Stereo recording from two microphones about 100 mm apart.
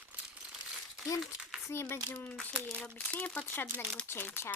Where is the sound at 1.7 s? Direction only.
25° left (ahead or behind).